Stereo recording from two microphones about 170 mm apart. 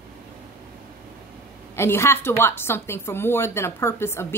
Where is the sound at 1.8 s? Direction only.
15° left (ahead or behind).